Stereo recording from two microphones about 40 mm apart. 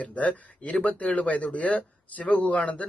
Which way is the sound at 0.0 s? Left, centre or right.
Left.